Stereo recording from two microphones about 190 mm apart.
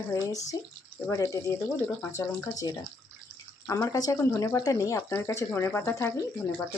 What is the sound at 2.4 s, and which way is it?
Speech, 20° left (ahead or behind).